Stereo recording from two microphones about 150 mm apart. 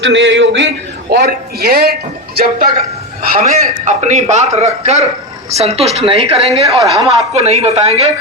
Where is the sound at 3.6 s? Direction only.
50° right (ahead or behind).